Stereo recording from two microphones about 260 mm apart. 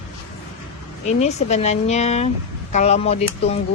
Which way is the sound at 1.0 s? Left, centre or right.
Left.